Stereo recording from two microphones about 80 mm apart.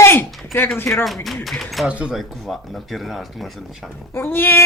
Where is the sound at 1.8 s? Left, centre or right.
Centre.